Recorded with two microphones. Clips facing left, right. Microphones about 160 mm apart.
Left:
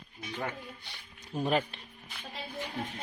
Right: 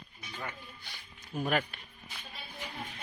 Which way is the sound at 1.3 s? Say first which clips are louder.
Left 2 dB; 25° left (ahead or behind).